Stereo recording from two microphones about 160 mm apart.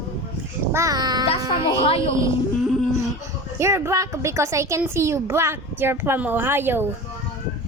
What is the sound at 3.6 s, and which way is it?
A child's voice, 15° right (ahead or behind).